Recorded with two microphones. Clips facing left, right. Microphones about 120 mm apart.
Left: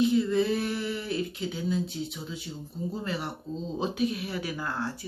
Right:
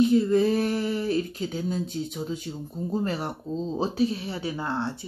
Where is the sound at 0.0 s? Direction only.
45° right (ahead or behind).